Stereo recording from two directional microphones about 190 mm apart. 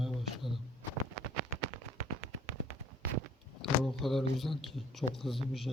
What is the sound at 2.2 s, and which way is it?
Fireworks, 35° right (ahead or behind).